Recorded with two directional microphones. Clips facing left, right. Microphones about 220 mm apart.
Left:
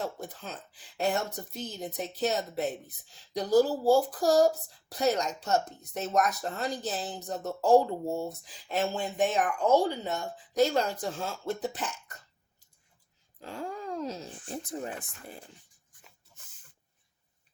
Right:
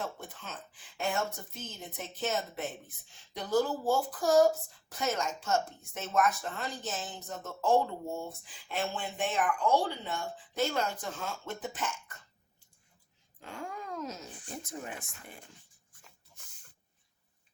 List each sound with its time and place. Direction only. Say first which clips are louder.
0.0 s speech: left 4 dB; 35° left (ahead or behind)
13.4 s speech: left 4 dB; 35° left (ahead or behind)